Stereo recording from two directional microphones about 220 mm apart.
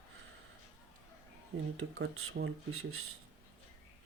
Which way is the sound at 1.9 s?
65° right (ahead or behind).